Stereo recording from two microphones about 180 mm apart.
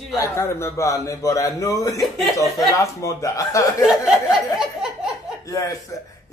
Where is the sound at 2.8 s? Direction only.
20° left (ahead or behind).